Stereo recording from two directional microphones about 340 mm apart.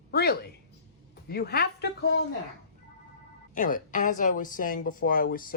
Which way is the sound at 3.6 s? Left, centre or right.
Left.